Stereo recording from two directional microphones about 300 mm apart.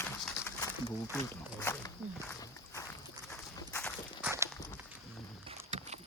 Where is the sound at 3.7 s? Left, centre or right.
Centre.